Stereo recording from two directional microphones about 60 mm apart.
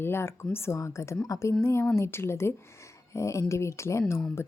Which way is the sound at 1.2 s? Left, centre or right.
Left.